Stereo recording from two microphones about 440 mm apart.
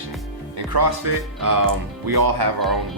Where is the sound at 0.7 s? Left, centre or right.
Right.